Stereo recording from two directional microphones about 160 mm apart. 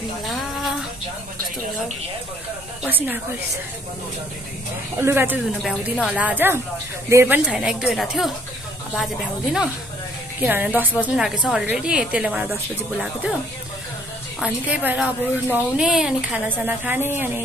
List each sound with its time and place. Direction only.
0.3 s a sound: centre (ahead or behind)
2.8 s a woman's voice: 10° right (ahead or behind)
4.9 s a woman's voice: 15° right (ahead or behind)
5.6 s a woman's voice: centre (ahead or behind)
14.4 s a woman's voice: 10° right (ahead or behind)